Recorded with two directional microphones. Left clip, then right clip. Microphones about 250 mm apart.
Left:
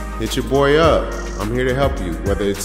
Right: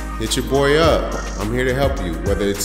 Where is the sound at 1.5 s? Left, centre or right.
Centre.